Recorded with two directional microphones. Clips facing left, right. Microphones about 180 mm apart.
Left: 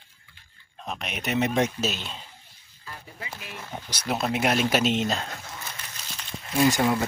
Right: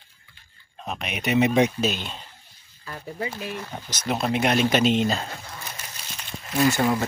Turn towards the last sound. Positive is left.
turn(degrees=5)  # may be behind; listen again after turning